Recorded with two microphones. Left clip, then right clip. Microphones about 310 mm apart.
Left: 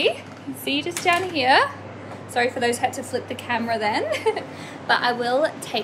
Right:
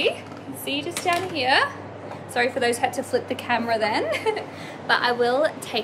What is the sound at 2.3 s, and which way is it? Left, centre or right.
A woman's voice, centre.